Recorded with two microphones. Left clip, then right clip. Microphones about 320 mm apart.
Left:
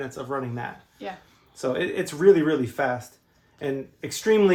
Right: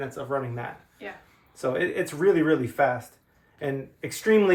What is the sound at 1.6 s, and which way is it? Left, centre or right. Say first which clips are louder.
Speech: even; left.